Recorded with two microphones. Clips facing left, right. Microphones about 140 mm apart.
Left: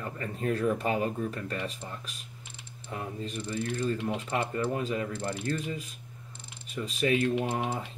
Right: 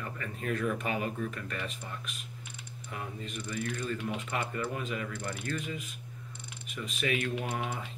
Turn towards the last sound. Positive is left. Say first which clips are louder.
# left 5 dB
turn(degrees=25)  # may be behind; listen again after turning